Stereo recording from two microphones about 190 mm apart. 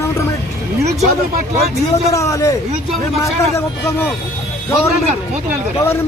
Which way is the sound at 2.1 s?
15° left (ahead or behind).